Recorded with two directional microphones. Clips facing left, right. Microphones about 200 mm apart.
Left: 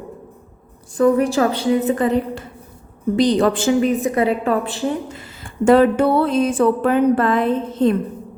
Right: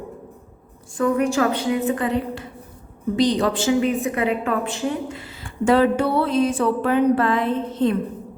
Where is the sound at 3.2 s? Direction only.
50° left (ahead or behind).